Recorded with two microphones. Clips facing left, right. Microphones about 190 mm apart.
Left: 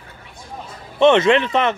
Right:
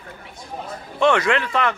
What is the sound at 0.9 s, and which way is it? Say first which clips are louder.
Speech: left 5 dB; 20° left (ahead or behind).